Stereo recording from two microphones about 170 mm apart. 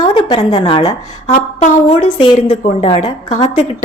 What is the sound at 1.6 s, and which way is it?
A woman's voice, 45° left (ahead or behind).